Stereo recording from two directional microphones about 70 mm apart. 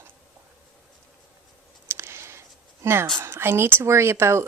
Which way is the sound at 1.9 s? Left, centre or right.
Right.